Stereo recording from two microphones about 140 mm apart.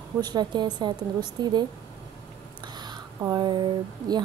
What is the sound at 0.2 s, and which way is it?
Speech, 30° right (ahead or behind).